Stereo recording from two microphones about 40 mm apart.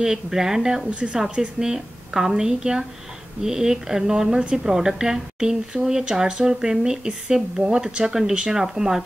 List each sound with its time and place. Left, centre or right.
0.0 s a woman's voice: centre
0.8 s a woman's voice: right
1.6 s a woman's voice: centre